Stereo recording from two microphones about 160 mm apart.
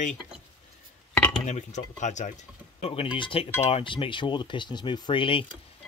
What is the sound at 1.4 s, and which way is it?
Cutlery, 45° left (ahead or behind).